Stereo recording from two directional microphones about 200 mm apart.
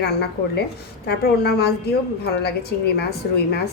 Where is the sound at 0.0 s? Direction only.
55° left (ahead or behind).